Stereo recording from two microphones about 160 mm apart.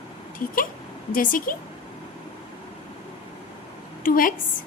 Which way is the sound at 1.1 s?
60° left (ahead or behind).